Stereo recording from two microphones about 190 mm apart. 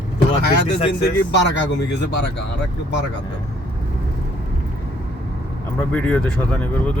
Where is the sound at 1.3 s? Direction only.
65° left (ahead or behind).